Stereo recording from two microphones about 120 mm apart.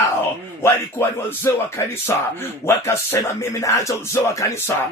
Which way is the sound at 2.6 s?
25° left (ahead or behind).